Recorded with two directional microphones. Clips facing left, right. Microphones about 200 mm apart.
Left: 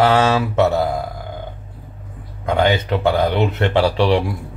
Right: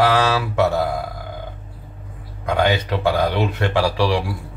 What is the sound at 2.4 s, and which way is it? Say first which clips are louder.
Speech: left 2 dB; 20° left (ahead or behind).